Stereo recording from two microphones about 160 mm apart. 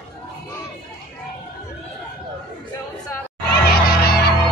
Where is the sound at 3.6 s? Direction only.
75° left (ahead or behind).